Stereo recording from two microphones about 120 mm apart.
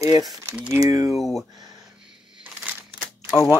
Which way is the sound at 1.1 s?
Centre (ahead or behind).